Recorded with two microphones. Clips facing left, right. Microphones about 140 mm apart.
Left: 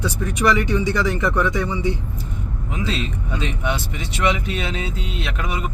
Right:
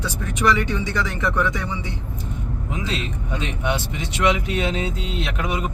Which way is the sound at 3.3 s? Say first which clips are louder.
Right 1 dB; 20° right (ahead or behind).